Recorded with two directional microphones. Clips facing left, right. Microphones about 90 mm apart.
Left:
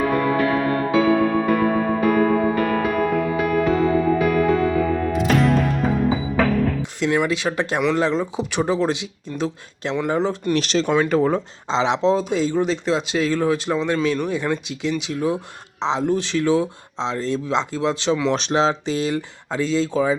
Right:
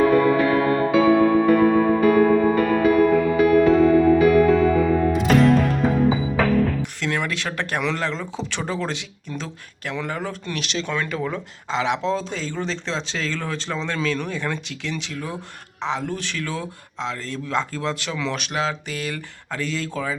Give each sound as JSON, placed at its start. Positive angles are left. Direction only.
{"t": 0.1, "sound": "music", "side_deg": 0}
{"t": 7.0, "sound": "speech", "side_deg": 20}
{"t": 10.5, "sound": "speech", "side_deg": 35}